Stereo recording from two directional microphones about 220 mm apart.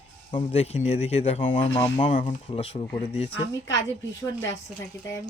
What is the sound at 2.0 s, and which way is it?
Speech, 35° left (ahead or behind).